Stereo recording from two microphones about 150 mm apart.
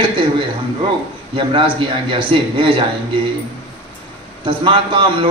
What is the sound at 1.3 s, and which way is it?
A man's voice, 35° right (ahead or behind).